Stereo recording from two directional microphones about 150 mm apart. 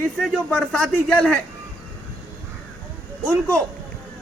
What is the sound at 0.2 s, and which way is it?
A man's voice, 5° left (ahead or behind).